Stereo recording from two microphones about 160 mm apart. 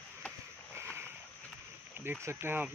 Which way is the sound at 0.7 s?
15° right (ahead or behind).